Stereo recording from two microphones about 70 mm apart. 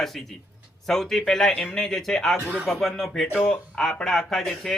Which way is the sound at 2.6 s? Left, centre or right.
Centre.